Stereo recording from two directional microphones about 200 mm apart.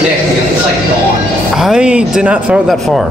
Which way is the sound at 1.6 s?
5° right (ahead or behind).